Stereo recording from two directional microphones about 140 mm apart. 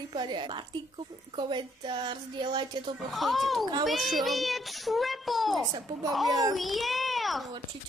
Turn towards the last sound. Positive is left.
turn(degrees=0)  # may be behind; listen again after turning